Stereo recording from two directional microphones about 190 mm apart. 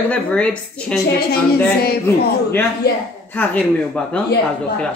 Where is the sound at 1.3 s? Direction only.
55° left (ahead or behind).